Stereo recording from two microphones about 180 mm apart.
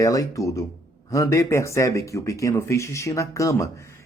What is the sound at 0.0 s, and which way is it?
Speech, 20° left (ahead or behind).